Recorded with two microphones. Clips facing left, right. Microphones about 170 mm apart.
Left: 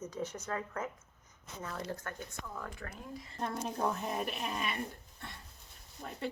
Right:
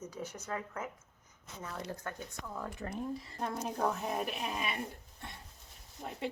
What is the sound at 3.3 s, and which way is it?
A woman's voice, 10° right (ahead or behind).